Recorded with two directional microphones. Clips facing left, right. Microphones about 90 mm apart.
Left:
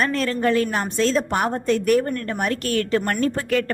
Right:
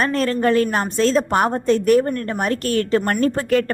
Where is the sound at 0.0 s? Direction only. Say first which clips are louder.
Right 3 dB; 40° right (ahead or behind).